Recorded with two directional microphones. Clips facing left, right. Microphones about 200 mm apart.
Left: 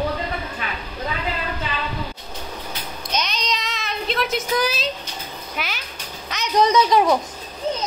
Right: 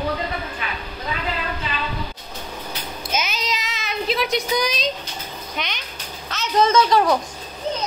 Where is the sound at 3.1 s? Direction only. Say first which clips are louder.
Even; 5° right (ahead or behind).